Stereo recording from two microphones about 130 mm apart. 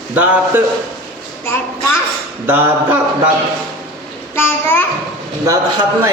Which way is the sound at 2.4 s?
15° right (ahead or behind).